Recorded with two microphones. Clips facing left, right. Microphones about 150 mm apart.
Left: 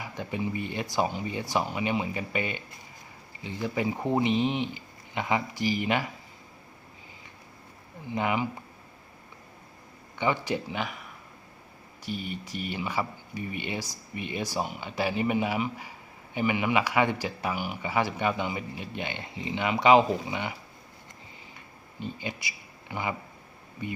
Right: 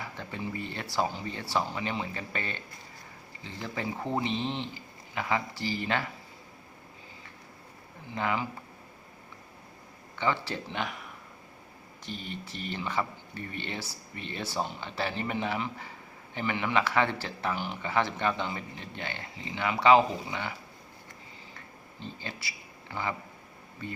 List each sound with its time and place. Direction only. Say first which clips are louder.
0.0 s speech: left 5 dB; 15° left (ahead or behind)
8.1 s speech: left 3 dB; 15° left (ahead or behind)
10.2 s speech: left 3 dB; 15° left (ahead or behind)
10.8 s speech: left 1 dB; centre (ahead or behind); by 20.5 s 15° left (ahead or behind)
21.5 s a sound: even; 15° left (ahead or behind)
23.8 s speech: left 4 dB; 15° left (ahead or behind)